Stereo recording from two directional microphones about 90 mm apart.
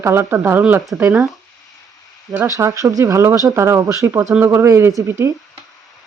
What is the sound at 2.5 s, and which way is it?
Speech, 35° right (ahead or behind).